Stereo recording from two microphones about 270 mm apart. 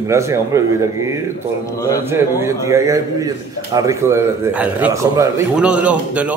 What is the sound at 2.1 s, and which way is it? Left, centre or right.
A man's voice, centre.